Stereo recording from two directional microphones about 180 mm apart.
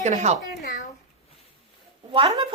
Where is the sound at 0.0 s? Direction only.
40° right (ahead or behind).